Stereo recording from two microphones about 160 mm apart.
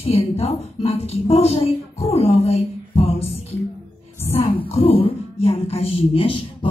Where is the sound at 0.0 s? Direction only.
40° left (ahead or behind).